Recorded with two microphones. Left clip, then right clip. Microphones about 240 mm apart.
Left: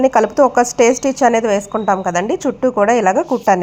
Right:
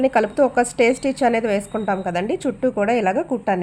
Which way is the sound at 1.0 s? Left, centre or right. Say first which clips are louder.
Left 6 dB; centre.